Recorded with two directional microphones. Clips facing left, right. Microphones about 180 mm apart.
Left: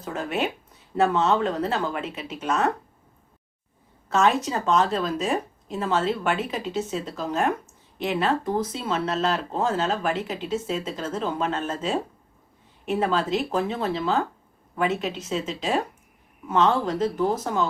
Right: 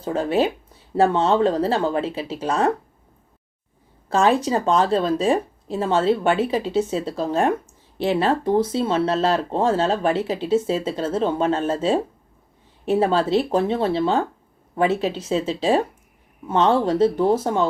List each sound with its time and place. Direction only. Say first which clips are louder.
0.0 s speech: right 7 dB; 30° right (ahead or behind)
4.1 s speech: right 4 dB; 30° right (ahead or behind)